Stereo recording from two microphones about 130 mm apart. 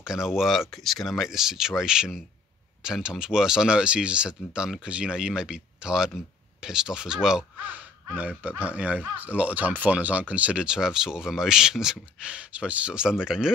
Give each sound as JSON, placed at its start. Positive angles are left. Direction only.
{"t": 0.0, "sound": "speech", "side_deg": -5}